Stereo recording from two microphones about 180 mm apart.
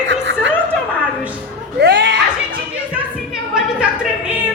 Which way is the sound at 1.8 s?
75° right (ahead or behind).